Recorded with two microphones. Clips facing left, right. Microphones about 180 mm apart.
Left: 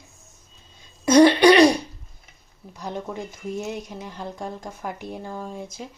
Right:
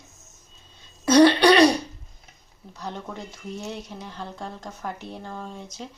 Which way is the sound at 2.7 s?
15° left (ahead or behind).